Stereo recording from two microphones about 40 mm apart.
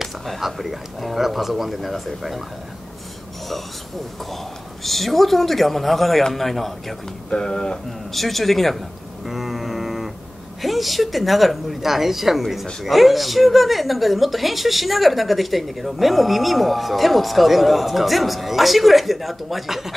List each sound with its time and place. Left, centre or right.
0.0 s speech: centre
4.8 s speech: centre
7.2 s speech: left
8.1 s speech: centre
9.2 s a sound: centre
10.6 s speech: centre